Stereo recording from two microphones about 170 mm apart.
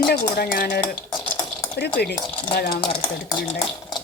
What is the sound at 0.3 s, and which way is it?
Speech, 60° left (ahead or behind).